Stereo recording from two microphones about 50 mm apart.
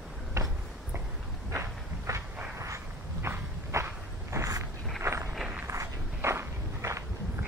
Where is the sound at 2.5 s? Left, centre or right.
Right.